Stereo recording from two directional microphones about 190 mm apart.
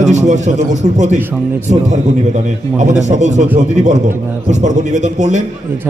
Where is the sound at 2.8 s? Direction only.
40° right (ahead or behind).